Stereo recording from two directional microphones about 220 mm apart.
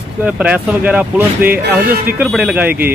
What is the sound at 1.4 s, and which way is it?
Speech, 40° right (ahead or behind).